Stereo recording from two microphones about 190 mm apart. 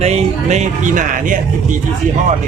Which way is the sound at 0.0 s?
35° right (ahead or behind).